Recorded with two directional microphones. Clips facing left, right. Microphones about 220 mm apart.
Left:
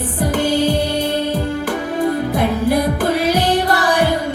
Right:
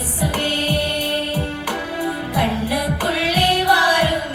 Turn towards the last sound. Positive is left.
turn(degrees=45)  # may be behind; listen again after turning